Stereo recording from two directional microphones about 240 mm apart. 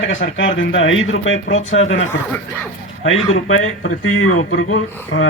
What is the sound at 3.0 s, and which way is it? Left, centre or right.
Speech, left.